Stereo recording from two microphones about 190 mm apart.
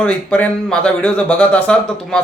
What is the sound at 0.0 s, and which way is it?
Speech, 5° left (ahead or behind).